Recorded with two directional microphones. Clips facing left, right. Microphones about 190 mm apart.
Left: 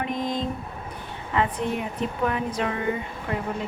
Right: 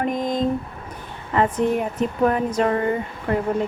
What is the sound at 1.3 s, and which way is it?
Speech, 45° right (ahead or behind).